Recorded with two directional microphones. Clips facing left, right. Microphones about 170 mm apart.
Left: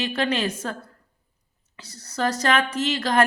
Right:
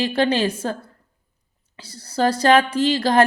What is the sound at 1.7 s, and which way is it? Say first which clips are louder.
Speech: right 6 dB; 30° right (ahead or behind).